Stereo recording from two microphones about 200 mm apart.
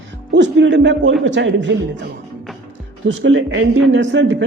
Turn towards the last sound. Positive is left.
turn(degrees=-65)  # may be behind; listen again after turning